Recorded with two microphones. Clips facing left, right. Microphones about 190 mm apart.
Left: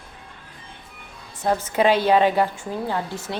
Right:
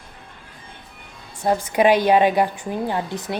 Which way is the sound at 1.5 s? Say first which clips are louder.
Right 2 dB; 15° right (ahead or behind).